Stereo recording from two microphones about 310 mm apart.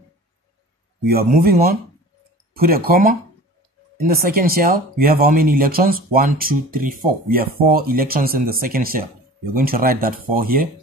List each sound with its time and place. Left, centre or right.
1.0 s speech: right